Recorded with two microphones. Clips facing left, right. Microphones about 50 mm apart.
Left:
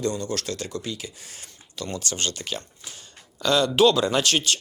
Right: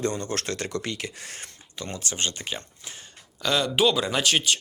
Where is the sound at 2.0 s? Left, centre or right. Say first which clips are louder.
Right 2 dB; centre.